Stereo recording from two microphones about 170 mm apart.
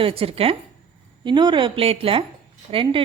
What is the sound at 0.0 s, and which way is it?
A woman's voice, 35° right (ahead or behind).